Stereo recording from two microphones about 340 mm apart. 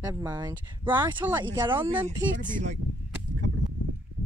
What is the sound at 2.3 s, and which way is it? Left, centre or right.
Speech, right.